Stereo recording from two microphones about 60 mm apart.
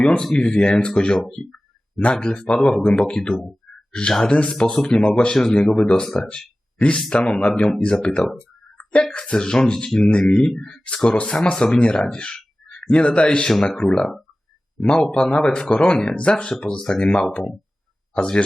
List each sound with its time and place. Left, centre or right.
0.2 s speech: centre
8.2 s a sound: centre
9.1 s a man's voice: centre
15.2 s speech: centre